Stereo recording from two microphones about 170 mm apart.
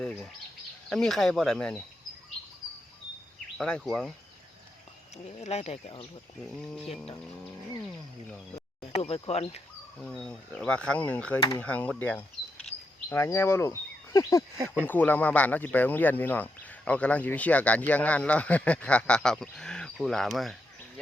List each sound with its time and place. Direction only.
0.9 s speech: centre (ahead or behind)
3.6 s speech: 5° left (ahead or behind)
5.1 s speech: 40° left (ahead or behind)
6.4 s speech: 5° left (ahead or behind)
8.9 s speech: 35° left (ahead or behind)
10.0 s speech: 5° left (ahead or behind)